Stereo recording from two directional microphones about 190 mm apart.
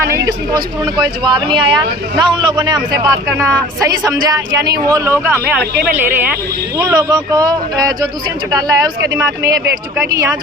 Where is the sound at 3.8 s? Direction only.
20° right (ahead or behind).